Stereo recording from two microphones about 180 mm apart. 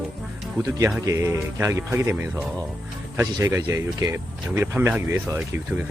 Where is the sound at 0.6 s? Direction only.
20° right (ahead or behind).